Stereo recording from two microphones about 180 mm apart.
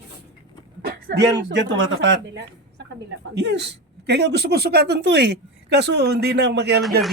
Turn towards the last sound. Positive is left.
turn(degrees=-70)  # may be behind; listen again after turning